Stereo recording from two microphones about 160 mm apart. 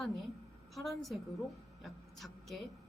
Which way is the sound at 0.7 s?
Centre (ahead or behind).